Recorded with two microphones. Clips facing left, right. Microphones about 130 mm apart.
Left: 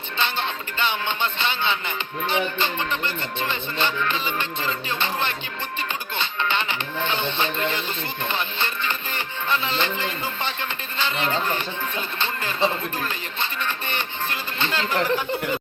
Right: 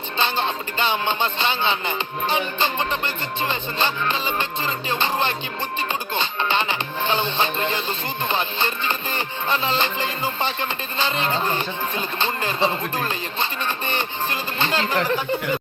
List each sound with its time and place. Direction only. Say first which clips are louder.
0.2 s music: right 3 dB; 35° right (ahead or behind)